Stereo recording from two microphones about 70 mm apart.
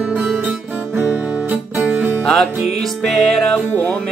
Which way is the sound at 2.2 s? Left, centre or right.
Centre.